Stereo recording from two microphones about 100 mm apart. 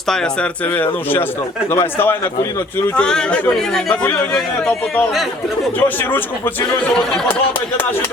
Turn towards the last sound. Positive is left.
turn(degrees=20)  # may be behind; listen again after turning